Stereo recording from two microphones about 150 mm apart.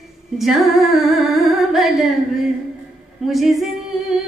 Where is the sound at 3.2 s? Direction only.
Centre (ahead or behind).